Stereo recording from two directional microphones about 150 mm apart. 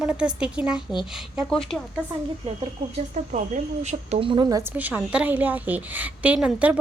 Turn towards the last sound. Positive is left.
turn(degrees=-10)  # may be behind; listen again after turning